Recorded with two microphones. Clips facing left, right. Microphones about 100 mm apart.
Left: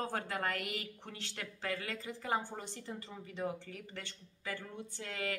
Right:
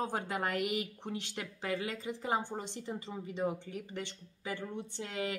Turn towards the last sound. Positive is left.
turn(degrees=-20)  # may be behind; listen again after turning